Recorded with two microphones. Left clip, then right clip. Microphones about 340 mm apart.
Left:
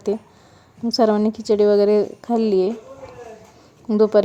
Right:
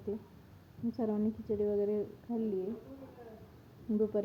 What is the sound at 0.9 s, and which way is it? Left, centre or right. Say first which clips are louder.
A woman's voice: left 18 dB; left.